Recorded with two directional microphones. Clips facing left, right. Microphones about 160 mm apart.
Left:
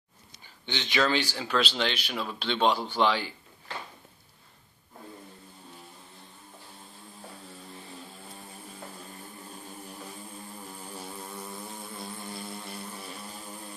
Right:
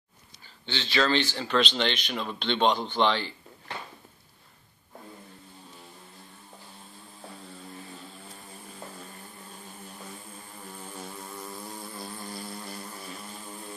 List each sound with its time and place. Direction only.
0.7 s speech: 15° left (ahead or behind)
11.0 s vehicle: 5° left (ahead or behind)